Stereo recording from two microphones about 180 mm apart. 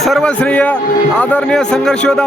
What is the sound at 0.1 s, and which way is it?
Speech, 10° left (ahead or behind).